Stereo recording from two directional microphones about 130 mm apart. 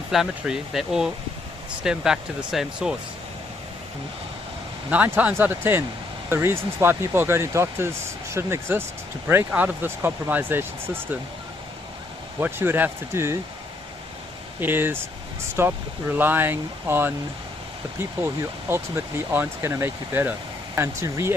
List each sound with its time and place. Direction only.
0.1 s speech: 5° right (ahead or behind)
4.9 s speech: 10° right (ahead or behind)
12.4 s speech: 15° right (ahead or behind)
14.6 s speech: 15° right (ahead or behind)
18.7 s speech: 15° right (ahead or behind)